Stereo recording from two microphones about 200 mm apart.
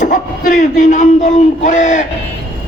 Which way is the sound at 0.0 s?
40° left (ahead or behind).